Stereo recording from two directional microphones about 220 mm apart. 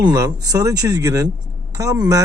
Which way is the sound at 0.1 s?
15° right (ahead or behind).